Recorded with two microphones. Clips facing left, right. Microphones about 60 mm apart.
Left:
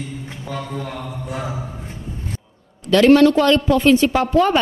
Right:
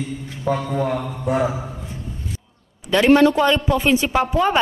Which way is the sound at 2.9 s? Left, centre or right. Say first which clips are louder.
Left 2 dB; centre.